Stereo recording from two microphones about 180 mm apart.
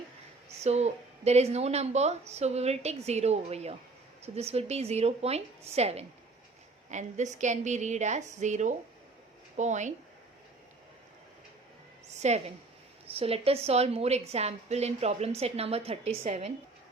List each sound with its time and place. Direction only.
0.6 s a woman's voice: 35° right (ahead or behind)
12.1 s a sound: 40° right (ahead or behind)
13.1 s a woman's voice: 30° right (ahead or behind)